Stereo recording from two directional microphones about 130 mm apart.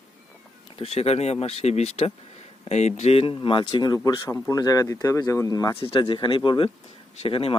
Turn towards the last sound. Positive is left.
turn(degrees=45)  # may be behind; listen again after turning